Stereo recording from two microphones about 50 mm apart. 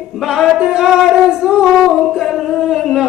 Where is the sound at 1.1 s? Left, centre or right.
Centre.